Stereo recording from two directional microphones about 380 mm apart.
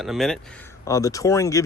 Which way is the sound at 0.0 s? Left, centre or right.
Centre.